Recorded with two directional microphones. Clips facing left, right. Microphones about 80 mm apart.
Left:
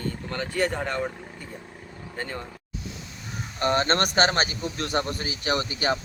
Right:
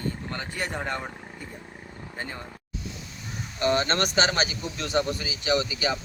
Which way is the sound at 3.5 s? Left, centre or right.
Left.